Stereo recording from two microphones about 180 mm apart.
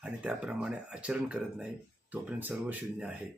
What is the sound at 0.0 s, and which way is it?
Speech, 5° right (ahead or behind).